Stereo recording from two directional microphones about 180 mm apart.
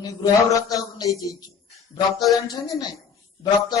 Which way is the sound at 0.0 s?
20° left (ahead or behind).